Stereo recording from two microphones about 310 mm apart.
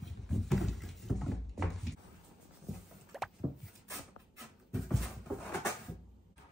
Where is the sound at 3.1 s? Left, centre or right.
Centre.